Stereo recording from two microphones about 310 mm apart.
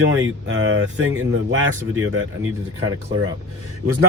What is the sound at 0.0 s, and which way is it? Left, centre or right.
A man's voice, right.